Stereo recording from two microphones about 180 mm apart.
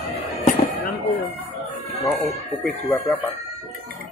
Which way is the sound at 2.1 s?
Centre (ahead or behind).